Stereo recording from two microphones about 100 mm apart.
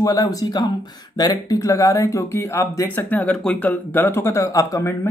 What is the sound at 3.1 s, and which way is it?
Speech, 15° left (ahead or behind).